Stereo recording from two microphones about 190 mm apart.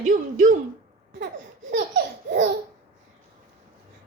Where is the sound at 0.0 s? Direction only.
40° right (ahead or behind).